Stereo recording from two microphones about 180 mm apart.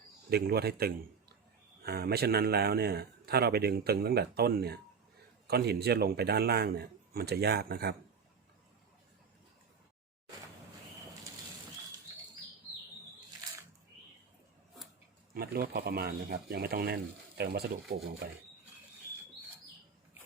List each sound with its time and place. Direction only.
0.3 s a man's voice: 60° right (ahead or behind)
15.4 s a man's voice: 55° right (ahead or behind)